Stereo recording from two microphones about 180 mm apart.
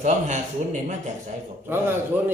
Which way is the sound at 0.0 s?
40° right (ahead or behind).